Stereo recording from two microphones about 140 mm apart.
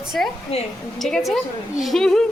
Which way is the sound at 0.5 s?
50° left (ahead or behind).